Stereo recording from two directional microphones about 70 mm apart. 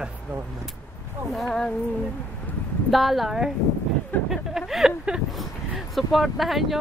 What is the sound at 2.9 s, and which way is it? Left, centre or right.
Speech, centre.